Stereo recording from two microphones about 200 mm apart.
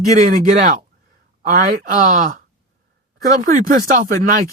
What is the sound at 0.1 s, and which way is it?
Speech, 40° right (ahead or behind).